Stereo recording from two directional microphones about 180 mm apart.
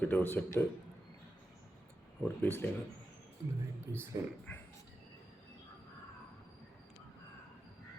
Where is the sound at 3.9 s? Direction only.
15° right (ahead or behind).